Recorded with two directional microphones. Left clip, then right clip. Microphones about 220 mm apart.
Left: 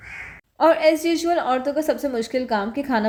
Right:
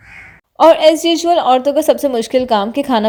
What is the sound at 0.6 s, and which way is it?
A woman's voice, 35° right (ahead or behind).